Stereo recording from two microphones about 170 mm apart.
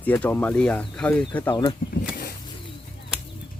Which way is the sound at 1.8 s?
55° left (ahead or behind).